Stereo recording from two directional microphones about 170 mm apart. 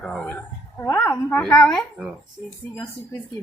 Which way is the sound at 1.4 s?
5° left (ahead or behind).